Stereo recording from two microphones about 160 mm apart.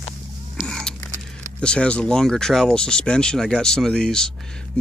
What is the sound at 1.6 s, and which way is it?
Speech, 5° left (ahead or behind).